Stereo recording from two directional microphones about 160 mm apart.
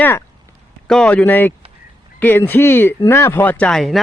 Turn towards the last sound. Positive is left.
turn(degrees=0)  # may be behind; listen again after turning